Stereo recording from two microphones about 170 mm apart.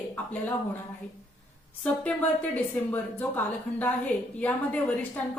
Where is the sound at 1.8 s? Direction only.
10° left (ahead or behind).